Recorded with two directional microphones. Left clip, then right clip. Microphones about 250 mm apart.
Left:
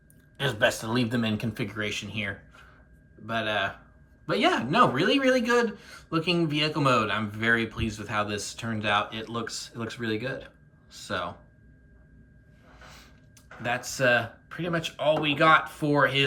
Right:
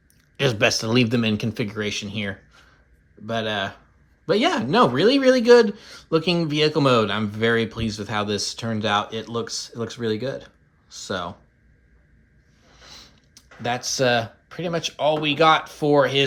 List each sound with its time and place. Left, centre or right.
0.3 s speech: right; by 11.3 s centre
12.9 s a sound: centre
15.2 s speech: centre